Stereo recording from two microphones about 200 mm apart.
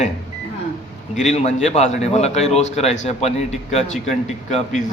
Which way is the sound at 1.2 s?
35° left (ahead or behind).